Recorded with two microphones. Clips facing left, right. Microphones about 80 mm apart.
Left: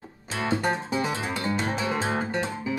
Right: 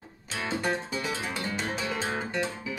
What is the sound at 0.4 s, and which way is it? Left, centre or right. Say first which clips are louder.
Music: left 4 dB; left.